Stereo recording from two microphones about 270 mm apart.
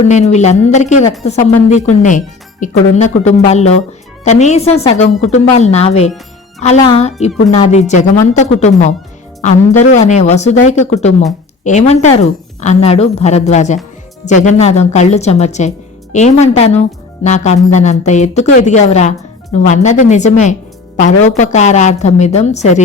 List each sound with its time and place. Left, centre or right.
0.0 s speech: left